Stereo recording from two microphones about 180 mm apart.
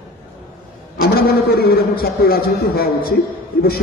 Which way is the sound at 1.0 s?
60° left (ahead or behind).